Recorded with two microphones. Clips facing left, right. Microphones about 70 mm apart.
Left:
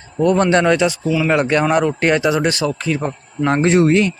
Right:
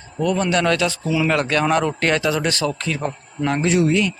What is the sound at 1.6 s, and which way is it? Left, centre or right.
Speech, centre.